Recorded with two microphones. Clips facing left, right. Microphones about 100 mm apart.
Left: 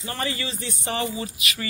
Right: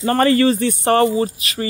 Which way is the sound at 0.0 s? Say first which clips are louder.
Right 16 dB; 55° right (ahead or behind).